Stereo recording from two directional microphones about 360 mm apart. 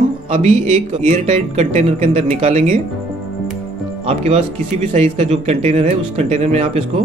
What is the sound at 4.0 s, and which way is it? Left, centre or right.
Speech, centre.